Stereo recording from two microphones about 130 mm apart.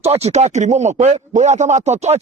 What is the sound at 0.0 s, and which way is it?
Speech, 55° right (ahead or behind).